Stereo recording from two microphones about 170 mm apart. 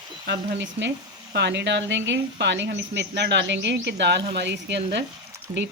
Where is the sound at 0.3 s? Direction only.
90° right.